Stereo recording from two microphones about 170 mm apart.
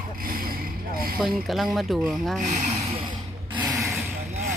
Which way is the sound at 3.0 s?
30° right (ahead or behind).